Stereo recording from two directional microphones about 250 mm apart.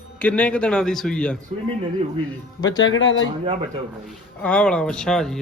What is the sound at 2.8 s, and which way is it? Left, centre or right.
Speech, left.